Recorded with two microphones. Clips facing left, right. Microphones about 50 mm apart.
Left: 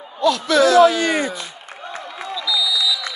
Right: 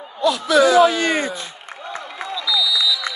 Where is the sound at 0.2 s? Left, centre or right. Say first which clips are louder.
Even; centre.